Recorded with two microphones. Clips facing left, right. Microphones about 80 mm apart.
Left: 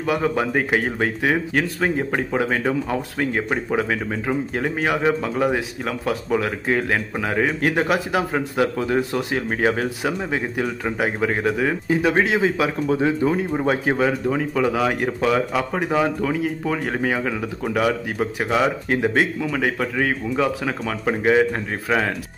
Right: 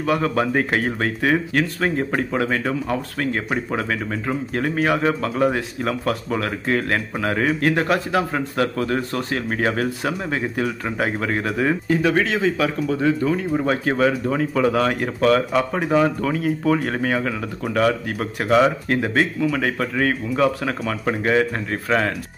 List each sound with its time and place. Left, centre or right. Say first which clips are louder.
0.0 s speech: right 1 dB; centre
12.0 s speech: left 3 dB; centre